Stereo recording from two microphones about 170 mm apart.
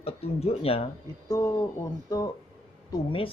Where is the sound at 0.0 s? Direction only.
35° left (ahead or behind).